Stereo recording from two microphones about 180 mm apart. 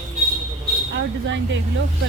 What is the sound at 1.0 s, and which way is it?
Speech, 90° right.